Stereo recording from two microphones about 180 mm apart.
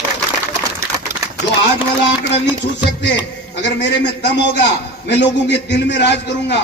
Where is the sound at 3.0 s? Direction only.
75° left (ahead or behind).